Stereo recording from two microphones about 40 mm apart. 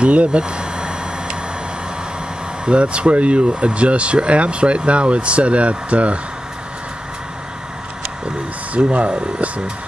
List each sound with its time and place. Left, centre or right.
0.0 s speech: right
0.4 s a sound: right
2.6 s speech: right
8.9 s speech: right